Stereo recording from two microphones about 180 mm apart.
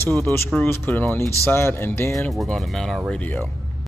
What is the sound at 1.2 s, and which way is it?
Speech, 15° right (ahead or behind).